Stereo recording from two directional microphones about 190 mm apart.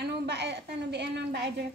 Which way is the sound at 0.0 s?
60° right (ahead or behind).